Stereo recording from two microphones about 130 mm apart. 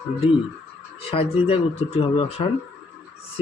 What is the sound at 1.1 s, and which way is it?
Speech, 45° left (ahead or behind).